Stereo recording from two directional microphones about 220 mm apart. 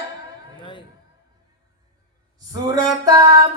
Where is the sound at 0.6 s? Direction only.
20° left (ahead or behind).